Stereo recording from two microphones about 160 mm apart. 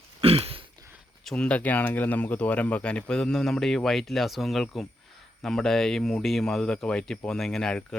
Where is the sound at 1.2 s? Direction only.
5° left (ahead or behind).